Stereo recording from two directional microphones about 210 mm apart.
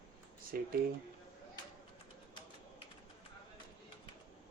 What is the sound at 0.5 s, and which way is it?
Speech, 45° right (ahead or behind).